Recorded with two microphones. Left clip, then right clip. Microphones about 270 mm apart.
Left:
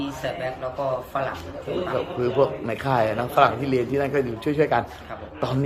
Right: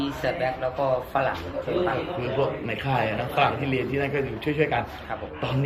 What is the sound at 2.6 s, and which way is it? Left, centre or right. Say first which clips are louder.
A man's voice: left 4 dB; left.